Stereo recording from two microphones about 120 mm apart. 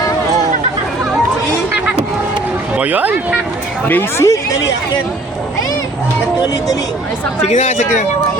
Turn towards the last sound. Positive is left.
turn(degrees=90)